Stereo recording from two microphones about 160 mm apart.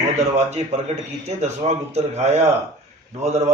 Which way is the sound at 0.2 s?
45° right (ahead or behind).